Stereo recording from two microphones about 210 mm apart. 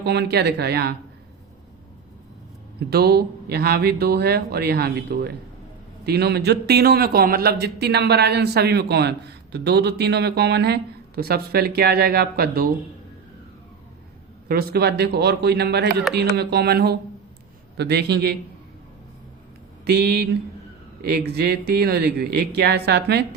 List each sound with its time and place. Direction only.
0.0 s a man's voice: 50° right (ahead or behind)
2.9 s a man's voice: 50° right (ahead or behind)
14.4 s a man's voice: 50° right (ahead or behind)
19.8 s a man's voice: 50° right (ahead or behind)